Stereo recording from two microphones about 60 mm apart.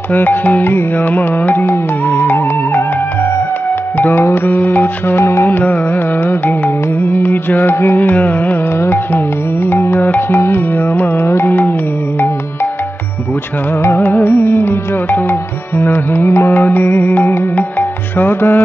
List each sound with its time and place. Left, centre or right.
0.1 s music: left
4.0 s music: left
5.5 s music: left
8.0 s music: left
8.7 s music: left
13.8 s music: left
17.6 s music: left